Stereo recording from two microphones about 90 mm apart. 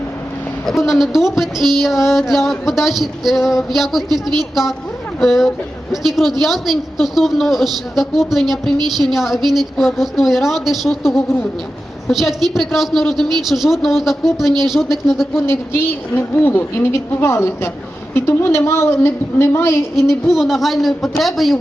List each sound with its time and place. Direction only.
0.9 s a woman's voice: 5° right (ahead or behind)
15.4 s a woman's voice: 30° left (ahead or behind)
20.3 s a woman's voice: centre (ahead or behind)